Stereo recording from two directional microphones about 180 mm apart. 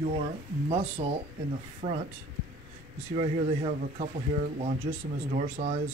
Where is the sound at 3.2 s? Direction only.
45° right (ahead or behind).